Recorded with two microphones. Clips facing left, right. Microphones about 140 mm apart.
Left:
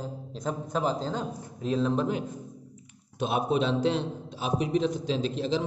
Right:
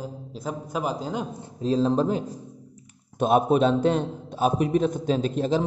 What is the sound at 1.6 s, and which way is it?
Speech, 35° right (ahead or behind).